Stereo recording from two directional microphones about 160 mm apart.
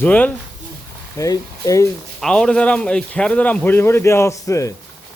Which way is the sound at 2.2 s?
5° left (ahead or behind).